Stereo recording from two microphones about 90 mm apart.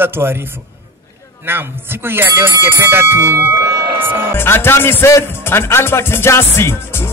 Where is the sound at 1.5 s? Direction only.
25° right (ahead or behind).